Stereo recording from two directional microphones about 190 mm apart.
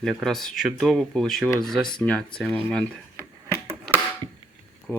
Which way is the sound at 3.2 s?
15° right (ahead or behind).